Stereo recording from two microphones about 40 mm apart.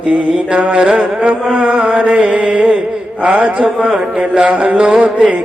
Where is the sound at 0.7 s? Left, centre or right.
Right.